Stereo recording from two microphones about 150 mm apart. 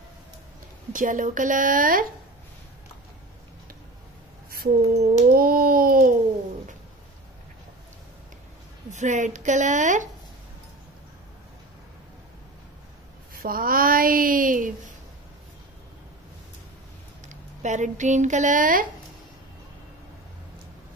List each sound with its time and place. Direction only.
0.9 s speech: 60° right (ahead or behind)
4.5 s speech: 85° right
5.3 s a sound: 80° right
8.9 s speech: 55° right (ahead or behind)
13.3 s speech: 75° right (ahead or behind)
17.3 s speech: 55° right (ahead or behind)